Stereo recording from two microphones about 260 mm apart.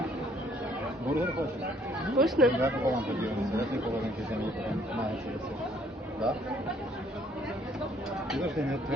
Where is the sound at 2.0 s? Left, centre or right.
Centre.